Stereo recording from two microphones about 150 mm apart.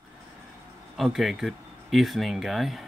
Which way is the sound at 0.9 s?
Centre (ahead or behind).